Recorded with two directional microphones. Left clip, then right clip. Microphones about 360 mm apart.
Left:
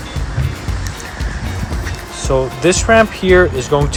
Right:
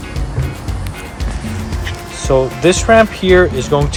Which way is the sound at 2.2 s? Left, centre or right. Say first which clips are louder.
Right 2 dB; centre.